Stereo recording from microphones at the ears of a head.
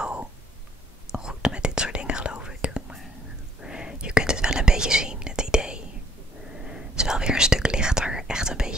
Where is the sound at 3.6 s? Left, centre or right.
Centre.